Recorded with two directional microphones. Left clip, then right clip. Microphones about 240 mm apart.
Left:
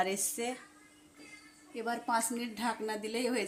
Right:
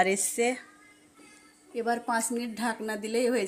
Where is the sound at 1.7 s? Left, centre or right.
Centre.